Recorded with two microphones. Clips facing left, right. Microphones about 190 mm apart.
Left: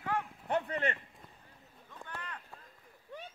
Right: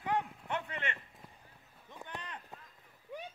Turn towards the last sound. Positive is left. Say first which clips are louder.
# right 2 dB
turn(degrees=-10)  # may be behind; listen again after turning